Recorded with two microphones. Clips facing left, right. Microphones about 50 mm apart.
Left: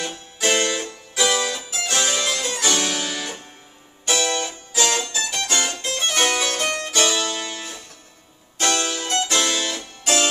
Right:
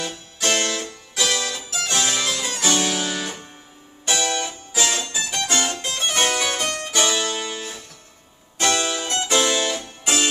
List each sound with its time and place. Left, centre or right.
0.0 s music: centre
4.0 s music: centre
8.5 s music: centre